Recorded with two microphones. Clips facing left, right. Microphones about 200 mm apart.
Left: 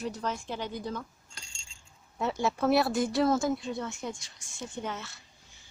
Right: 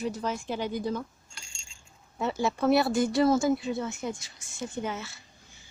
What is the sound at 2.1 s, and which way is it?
Speech, centre (ahead or behind).